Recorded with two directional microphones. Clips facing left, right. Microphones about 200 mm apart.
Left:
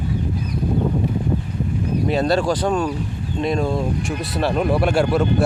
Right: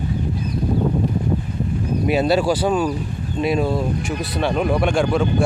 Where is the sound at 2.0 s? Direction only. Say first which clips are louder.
Right 2 dB; 5° right (ahead or behind).